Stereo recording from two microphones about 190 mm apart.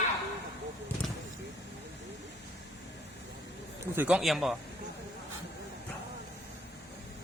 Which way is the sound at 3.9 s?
5° right (ahead or behind).